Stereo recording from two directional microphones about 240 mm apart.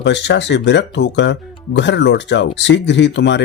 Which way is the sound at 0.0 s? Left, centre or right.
Left.